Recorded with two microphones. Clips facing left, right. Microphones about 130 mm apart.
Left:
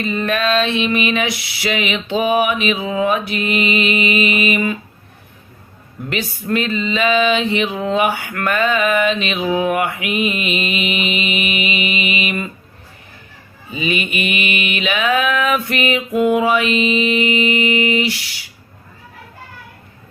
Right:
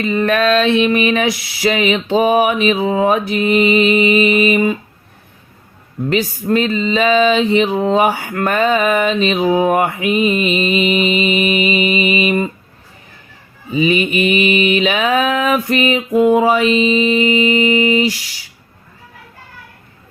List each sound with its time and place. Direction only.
0.2 s mantra: 45° right (ahead or behind)
0.9 s male singing: 40° right (ahead or behind)
6.1 s male singing: 35° right (ahead or behind)
13.7 s male singing: 35° right (ahead or behind)